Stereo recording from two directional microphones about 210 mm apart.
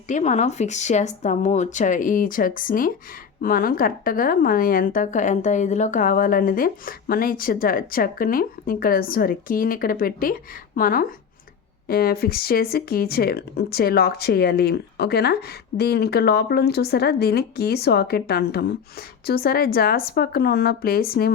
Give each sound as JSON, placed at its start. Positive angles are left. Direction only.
{"t": 0.1, "sound": "a woman's voice", "side_deg": 35}